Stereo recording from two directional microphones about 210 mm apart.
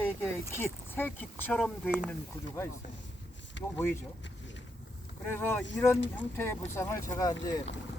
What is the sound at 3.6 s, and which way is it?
Speech, 60° left (ahead or behind).